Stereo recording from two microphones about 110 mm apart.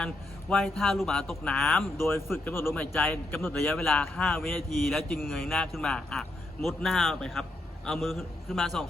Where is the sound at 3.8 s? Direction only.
5° left (ahead or behind).